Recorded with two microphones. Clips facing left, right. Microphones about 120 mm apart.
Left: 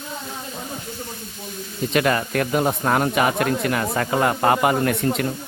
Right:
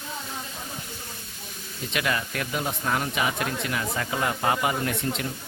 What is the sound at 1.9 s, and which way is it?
Speech, 45° left (ahead or behind).